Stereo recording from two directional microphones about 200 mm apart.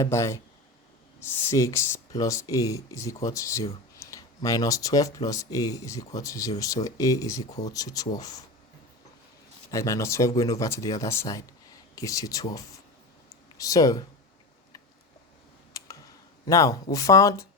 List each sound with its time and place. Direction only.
0.0 s speech: 15° left (ahead or behind)
9.7 s speech: 15° left (ahead or behind)
15.7 s computer keyboard: 20° left (ahead or behind)
16.5 s speech: 15° left (ahead or behind)